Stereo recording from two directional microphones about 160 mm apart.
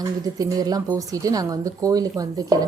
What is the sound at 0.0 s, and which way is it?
Speech, 25° right (ahead or behind).